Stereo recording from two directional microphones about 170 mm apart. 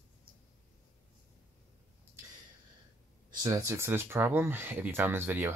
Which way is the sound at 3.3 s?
25° right (ahead or behind).